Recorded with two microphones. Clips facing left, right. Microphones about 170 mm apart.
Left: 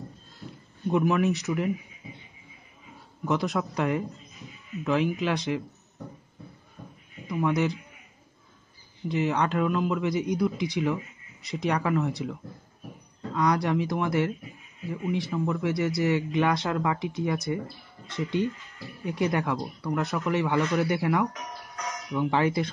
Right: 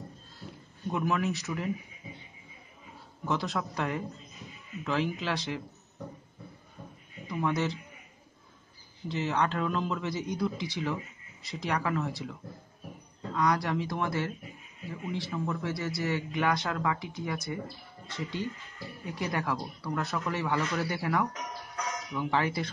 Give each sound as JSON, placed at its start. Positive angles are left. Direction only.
{"t": 0.9, "sound": "speech", "side_deg": 20}
{"t": 3.3, "sound": "speech", "side_deg": 15}
{"t": 7.2, "sound": "speech", "side_deg": 15}
{"t": 9.1, "sound": "speech", "side_deg": 15}
{"t": 13.4, "sound": "speech", "side_deg": 20}